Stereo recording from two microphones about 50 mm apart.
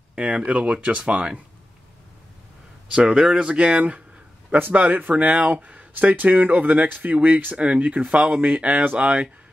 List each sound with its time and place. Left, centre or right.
0.1 s a sound: right
0.6 s speech: right
2.9 s speech: right
4.6 s speech: right; by 9.3 s centre